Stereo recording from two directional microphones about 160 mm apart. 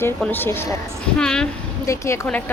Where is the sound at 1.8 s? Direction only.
20° left (ahead or behind).